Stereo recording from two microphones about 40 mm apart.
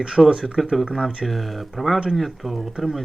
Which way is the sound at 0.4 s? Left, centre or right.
Centre.